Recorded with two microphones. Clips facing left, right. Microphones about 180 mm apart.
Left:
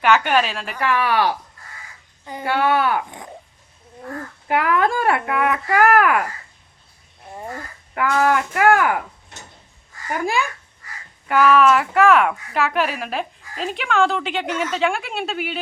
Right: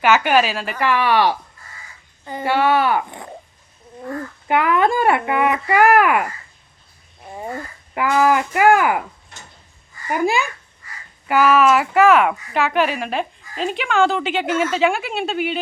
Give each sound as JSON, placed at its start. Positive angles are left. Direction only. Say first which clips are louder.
{"t": 0.0, "sound": "a woman's voice", "louder": "right 2 dB", "side_deg": -5}
{"t": 2.4, "sound": "a woman's voice", "louder": "right 2 dB", "side_deg": 0}
{"t": 4.4, "sound": "a woman's voice", "louder": "right 2 dB", "side_deg": 0}
{"t": 7.9, "sound": "a woman's voice", "louder": "right 2 dB", "side_deg": -5}
{"t": 11.3, "sound": "a woman's voice", "louder": "even", "side_deg": -5}